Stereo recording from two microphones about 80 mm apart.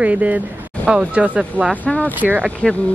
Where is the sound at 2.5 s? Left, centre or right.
Centre.